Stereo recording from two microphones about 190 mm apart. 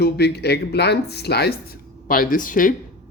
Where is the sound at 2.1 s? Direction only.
50° left (ahead or behind).